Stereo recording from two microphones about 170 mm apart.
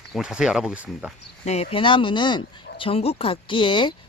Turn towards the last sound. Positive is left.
turn(degrees=30)  # may be behind; listen again after turning